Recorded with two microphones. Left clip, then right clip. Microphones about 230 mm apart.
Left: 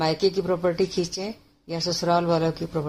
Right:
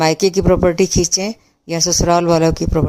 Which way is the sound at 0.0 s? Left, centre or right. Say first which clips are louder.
Right 8 dB; right.